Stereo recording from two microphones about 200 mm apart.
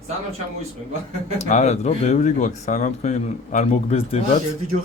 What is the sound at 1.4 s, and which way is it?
Speech, 35° left (ahead or behind).